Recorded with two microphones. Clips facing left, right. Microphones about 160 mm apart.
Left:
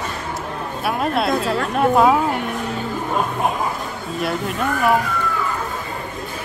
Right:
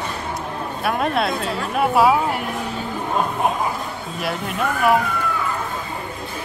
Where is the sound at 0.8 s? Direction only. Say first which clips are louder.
Left 1 dB; centre (ahead or behind).